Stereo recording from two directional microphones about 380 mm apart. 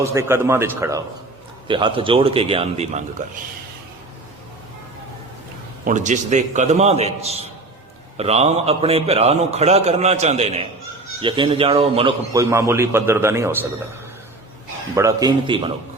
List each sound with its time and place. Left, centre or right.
0.0 s a man's voice: centre
5.8 s a man's voice: centre
14.9 s a man's voice: centre